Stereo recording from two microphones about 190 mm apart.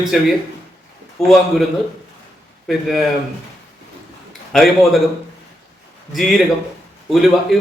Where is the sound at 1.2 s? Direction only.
Centre (ahead or behind).